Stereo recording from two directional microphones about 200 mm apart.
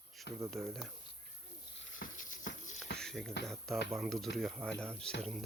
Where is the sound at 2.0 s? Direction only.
40° left (ahead or behind).